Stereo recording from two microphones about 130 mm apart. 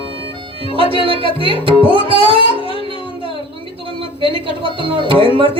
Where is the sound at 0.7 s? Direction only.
40° right (ahead or behind).